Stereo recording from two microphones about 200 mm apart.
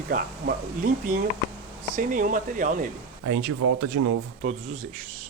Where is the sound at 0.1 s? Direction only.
45° right (ahead or behind).